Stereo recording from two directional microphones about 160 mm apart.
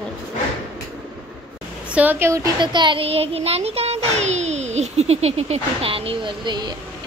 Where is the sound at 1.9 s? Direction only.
10° right (ahead or behind).